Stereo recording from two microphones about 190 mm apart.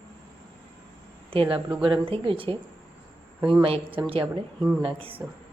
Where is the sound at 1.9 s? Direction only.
30° right (ahead or behind).